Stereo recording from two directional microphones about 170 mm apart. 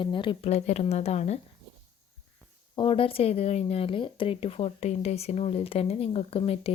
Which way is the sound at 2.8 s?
30° left (ahead or behind).